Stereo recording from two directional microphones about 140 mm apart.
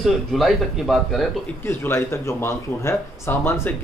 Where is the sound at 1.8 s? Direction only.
20° left (ahead or behind).